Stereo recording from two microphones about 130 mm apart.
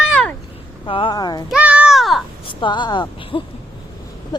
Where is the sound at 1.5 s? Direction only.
10° right (ahead or behind).